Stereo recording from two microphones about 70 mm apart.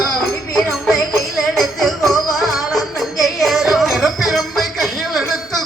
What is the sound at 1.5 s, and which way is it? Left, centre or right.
Music, centre.